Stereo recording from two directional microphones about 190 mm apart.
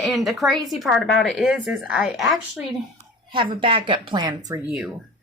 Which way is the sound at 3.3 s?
25° right (ahead or behind).